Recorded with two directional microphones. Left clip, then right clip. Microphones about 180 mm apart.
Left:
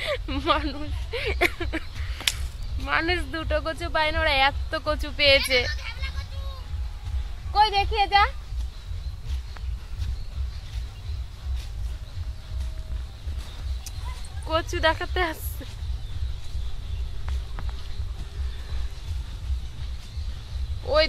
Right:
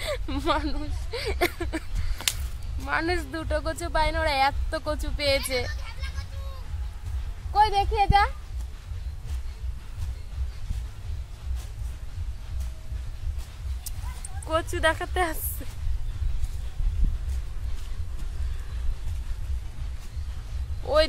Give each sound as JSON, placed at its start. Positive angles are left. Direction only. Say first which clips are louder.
{"t": 0.0, "sound": "a sound", "louder": "left 2 dB", "side_deg": 0}
{"t": 2.8, "sound": "speech", "louder": "left 2 dB", "side_deg": 5}
{"t": 5.7, "sound": "vehicle", "louder": "left 6 dB", "side_deg": -20}
{"t": 7.5, "sound": "speech", "louder": "left 1 dB", "side_deg": 5}
{"t": 14.5, "sound": "speech", "louder": "left 1 dB", "side_deg": 10}
{"t": 20.8, "sound": "speech", "louder": "left 1 dB", "side_deg": 0}